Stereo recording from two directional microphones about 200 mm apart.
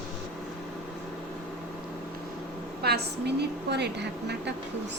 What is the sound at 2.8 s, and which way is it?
A woman's voice, 55° right (ahead or behind).